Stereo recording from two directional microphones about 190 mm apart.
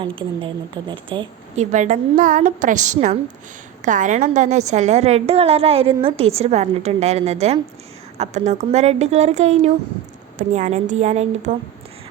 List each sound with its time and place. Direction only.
0.0 s a woman's voice: 25° right (ahead or behind)
1.7 s a woman's voice: 40° right (ahead or behind)